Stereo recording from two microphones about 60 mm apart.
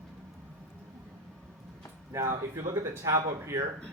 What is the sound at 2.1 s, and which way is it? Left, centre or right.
Speech, right.